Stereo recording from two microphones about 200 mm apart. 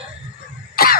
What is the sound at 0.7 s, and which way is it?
Cough, 50° left (ahead or behind).